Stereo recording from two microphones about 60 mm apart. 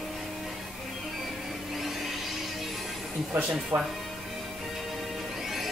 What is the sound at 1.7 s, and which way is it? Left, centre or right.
Vacuum cleaner, centre.